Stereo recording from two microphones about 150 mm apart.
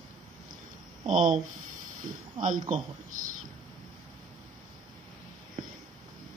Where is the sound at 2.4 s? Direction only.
60° right (ahead or behind).